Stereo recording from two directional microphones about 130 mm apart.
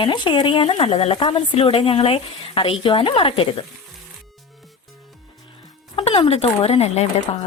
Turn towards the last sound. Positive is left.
turn(degrees=50)  # may be behind; listen again after turning